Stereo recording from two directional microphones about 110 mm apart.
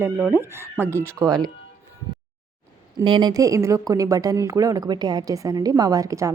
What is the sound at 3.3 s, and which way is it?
A woman's voice, 30° right (ahead or behind).